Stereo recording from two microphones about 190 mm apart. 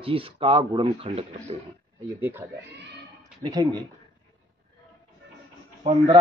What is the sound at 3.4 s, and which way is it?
Speech, 20° right (ahead or behind).